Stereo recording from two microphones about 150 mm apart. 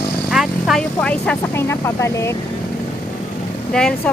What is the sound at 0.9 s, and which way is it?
Speech, 10° left (ahead or behind).